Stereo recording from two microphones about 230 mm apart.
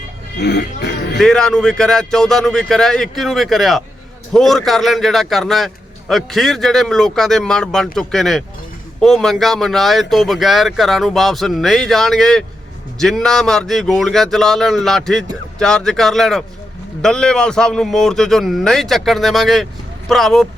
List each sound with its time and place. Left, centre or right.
0.3 s speech: left
1.2 s a man's voice: centre